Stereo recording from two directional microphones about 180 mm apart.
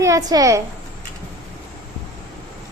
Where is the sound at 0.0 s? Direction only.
20° right (ahead or behind).